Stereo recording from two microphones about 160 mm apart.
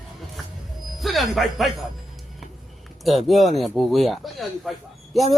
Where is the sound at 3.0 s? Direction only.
Centre (ahead or behind).